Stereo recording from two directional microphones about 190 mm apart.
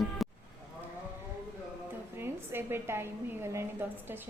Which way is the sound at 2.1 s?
10° right (ahead or behind).